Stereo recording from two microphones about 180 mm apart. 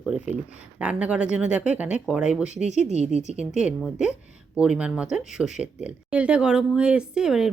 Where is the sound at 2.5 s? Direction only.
40° right (ahead or behind).